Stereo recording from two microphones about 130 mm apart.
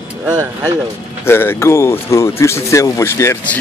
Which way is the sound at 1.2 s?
15° left (ahead or behind).